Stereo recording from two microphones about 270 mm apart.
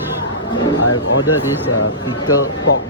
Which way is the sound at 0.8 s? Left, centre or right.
Left.